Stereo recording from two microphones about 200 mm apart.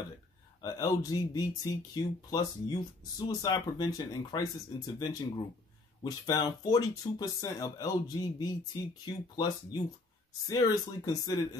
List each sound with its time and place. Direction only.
0.6 s speech: 15° left (ahead or behind)